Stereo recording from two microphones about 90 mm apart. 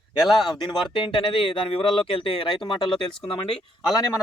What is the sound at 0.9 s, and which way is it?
Speech, 65° left (ahead or behind).